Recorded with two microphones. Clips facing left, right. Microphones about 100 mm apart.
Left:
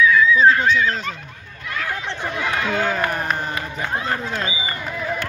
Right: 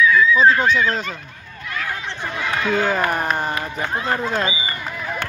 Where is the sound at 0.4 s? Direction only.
10° right (ahead or behind).